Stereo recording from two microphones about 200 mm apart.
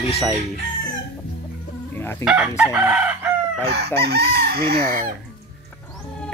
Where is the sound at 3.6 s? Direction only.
55° right (ahead or behind).